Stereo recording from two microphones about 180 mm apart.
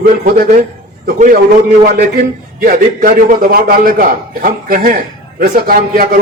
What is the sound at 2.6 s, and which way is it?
A man's voice, 50° right (ahead or behind).